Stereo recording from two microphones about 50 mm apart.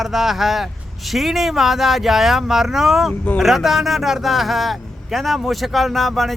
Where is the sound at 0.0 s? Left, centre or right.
Centre.